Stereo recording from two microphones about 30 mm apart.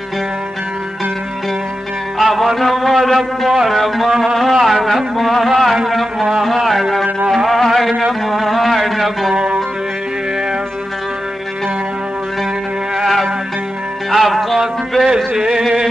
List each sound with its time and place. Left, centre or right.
2.1 s music: centre
3.6 s speech: centre
4.4 s a sound: centre
7.2 s music: centre
9.3 s music: right
13.0 s music: centre
15.0 s music: centre